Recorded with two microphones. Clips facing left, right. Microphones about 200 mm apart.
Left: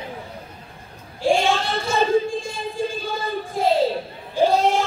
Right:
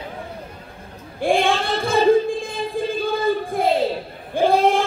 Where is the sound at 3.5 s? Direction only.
55° right (ahead or behind).